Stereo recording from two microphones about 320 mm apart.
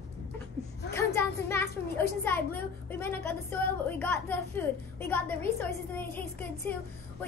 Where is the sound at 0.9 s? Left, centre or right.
Centre.